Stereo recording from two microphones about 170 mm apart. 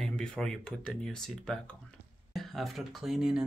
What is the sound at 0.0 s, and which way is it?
Speech, 5° left (ahead or behind).